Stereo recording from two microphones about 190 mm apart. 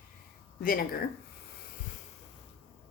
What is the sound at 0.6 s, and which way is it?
Speech, 50° left (ahead or behind).